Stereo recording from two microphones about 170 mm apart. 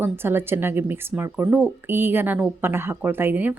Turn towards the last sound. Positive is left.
turn(degrees=-10)  # may be behind; listen again after turning